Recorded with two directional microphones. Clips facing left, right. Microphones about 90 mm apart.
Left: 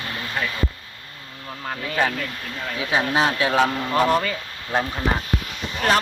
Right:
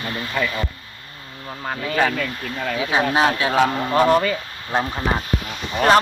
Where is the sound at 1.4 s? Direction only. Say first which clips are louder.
Right 3 dB; 15° right (ahead or behind).